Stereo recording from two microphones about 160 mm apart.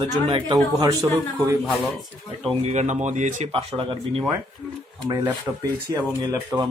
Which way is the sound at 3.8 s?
30° right (ahead or behind).